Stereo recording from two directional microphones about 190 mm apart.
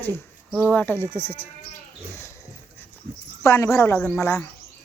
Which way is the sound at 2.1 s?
15° left (ahead or behind).